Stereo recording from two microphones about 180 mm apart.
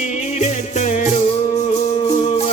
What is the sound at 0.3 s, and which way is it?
Music, 40° left (ahead or behind).